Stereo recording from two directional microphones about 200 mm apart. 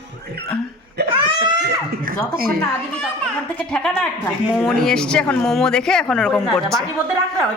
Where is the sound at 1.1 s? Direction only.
25° right (ahead or behind).